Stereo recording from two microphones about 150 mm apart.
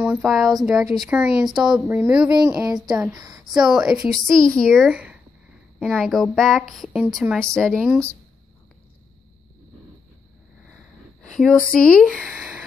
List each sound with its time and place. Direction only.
0.0 s a sound: 15° right (ahead or behind)
0.3 s speech: 5° right (ahead or behind)
1.4 s speech: 5° right (ahead or behind)
2.3 s a woman's voice: 25° right (ahead or behind)
2.7 s speech: 5° right (ahead or behind)
3.2 s speech: 25° right (ahead or behind)
3.5 s speech: 5° right (ahead or behind)
4.9 s a sound: 10° right (ahead or behind)
5.8 s speech: 5° right (ahead or behind)
11.3 s speech: centre (ahead or behind)